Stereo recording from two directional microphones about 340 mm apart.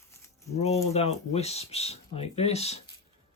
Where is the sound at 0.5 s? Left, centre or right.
Centre.